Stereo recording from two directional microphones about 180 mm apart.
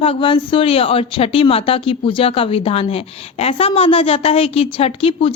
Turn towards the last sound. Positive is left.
turn(degrees=30)  # may be behind; listen again after turning